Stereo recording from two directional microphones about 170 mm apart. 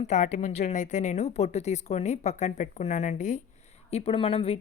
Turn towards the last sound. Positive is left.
turn(degrees=35)  # may be behind; listen again after turning